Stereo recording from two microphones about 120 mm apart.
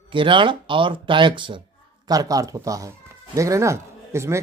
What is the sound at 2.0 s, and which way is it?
Speech, 30° right (ahead or behind).